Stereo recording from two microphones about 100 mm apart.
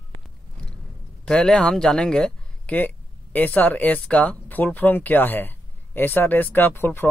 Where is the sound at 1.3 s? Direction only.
10° left (ahead or behind).